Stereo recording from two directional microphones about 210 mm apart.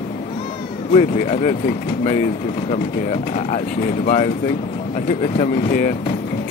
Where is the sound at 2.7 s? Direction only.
35° left (ahead or behind).